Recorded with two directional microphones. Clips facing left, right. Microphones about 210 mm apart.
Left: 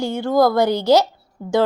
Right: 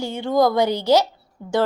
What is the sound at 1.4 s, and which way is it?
Speech, 40° left (ahead or behind).